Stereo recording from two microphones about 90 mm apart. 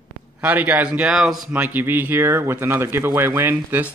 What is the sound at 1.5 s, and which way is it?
Speech, 20° right (ahead or behind).